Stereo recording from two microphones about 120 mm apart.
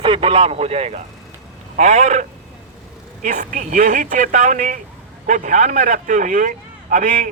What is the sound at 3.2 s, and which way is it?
A man's voice, 90° right.